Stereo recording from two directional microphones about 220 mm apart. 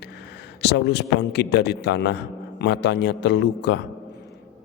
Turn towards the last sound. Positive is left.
turn(degrees=50)  # may be behind; listen again after turning